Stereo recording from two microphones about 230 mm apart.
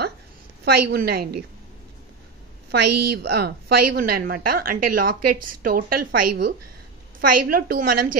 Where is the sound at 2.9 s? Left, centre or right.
Right.